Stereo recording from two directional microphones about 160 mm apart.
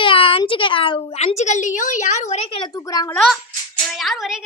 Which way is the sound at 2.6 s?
20° left (ahead or behind).